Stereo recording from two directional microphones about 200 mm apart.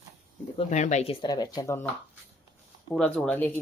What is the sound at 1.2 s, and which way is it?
Speech, 20° left (ahead or behind).